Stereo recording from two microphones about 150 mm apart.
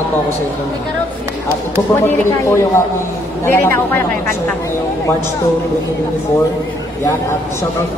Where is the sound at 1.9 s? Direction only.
15° left (ahead or behind).